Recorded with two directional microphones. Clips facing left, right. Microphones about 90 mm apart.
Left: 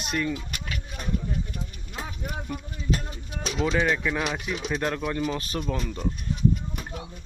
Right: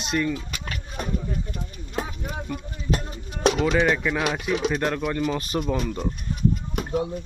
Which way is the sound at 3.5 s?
70° right (ahead or behind).